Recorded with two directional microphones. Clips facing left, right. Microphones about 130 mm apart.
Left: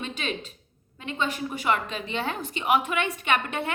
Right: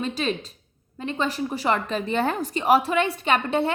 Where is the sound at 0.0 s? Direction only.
35° right (ahead or behind).